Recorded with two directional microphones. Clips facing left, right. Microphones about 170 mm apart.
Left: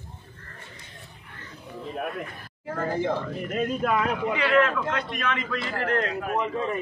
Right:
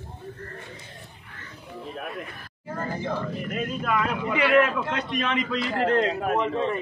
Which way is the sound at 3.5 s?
40° left (ahead or behind).